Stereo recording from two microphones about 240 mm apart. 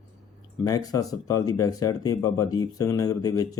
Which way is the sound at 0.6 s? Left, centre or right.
Centre.